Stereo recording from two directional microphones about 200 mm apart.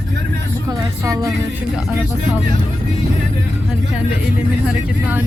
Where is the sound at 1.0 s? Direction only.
15° right (ahead or behind).